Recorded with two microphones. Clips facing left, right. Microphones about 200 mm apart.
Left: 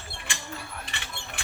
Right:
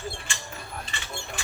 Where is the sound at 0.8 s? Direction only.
60° left (ahead or behind).